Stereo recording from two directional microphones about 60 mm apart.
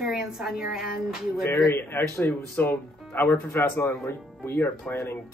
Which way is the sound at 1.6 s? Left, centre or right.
Left.